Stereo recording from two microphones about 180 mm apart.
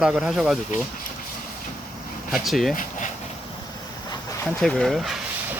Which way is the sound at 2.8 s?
45° left (ahead or behind).